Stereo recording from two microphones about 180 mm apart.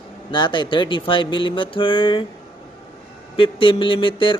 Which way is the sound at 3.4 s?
30° left (ahead or behind).